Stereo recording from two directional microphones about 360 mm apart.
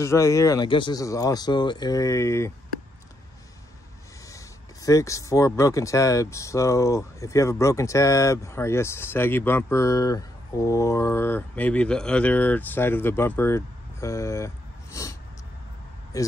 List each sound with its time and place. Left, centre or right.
0.0 s speech: centre
4.8 s speech: centre